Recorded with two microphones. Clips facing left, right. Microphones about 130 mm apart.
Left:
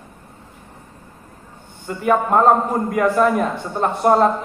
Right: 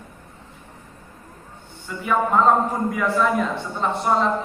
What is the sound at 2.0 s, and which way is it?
A man's voice, 55° left (ahead or behind).